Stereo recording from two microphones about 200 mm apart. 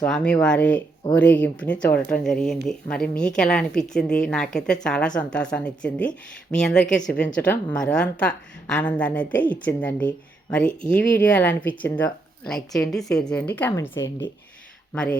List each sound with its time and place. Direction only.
0.0 s a woman's voice: 5° left (ahead or behind)
10.6 s speech: 40° left (ahead or behind)
11.3 s a woman's voice: 10° left (ahead or behind)